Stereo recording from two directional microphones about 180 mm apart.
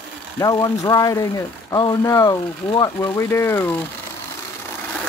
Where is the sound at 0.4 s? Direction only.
20° left (ahead or behind).